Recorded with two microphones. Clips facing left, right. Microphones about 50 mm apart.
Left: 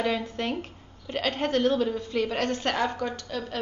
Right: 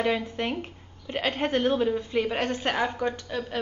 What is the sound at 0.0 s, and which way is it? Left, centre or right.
A woman's voice, centre.